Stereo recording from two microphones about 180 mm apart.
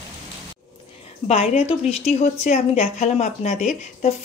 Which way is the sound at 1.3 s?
35° left (ahead or behind).